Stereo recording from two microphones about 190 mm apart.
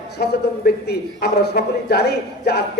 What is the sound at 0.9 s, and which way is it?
A man's voice, 60° left (ahead or behind).